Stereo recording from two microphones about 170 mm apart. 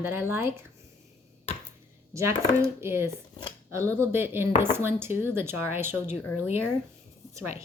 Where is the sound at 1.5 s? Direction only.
35° left (ahead or behind).